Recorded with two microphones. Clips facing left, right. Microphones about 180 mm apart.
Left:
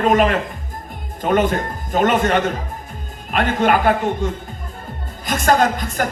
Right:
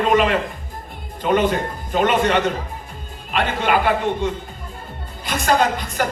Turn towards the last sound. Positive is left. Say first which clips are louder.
# left 1 dB
turn(degrees=45)  # may be behind; listen again after turning